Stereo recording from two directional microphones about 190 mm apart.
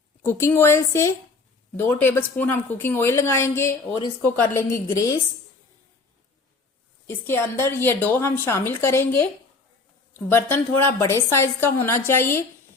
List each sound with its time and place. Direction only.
0.2 s a woman's voice: 10° left (ahead or behind)
7.1 s a woman's voice: 10° left (ahead or behind)
10.2 s a woman's voice: 10° left (ahead or behind)